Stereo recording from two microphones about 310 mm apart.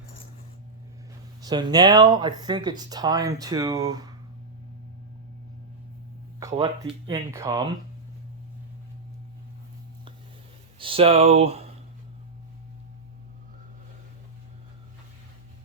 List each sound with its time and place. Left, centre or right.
1.4 s speech: centre
6.5 s speech: centre
6.8 s speech: centre
10.8 s speech: centre